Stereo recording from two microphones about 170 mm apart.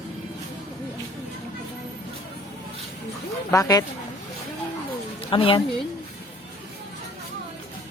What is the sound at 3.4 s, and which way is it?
Speech, 20° left (ahead or behind).